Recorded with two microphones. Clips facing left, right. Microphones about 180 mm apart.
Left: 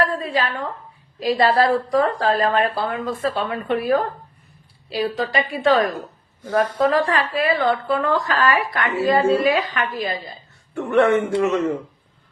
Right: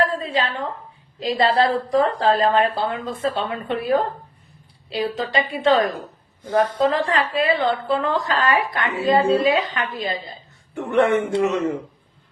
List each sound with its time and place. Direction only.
0.2 s a woman's voice: 20° right (ahead or behind)